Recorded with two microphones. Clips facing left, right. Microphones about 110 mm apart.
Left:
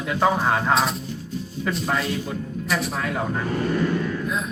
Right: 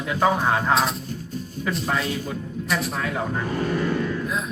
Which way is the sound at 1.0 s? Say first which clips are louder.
Left 1 dB; 45° right (ahead or behind).